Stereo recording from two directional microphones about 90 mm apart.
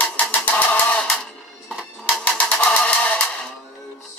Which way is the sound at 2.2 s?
15° left (ahead or behind).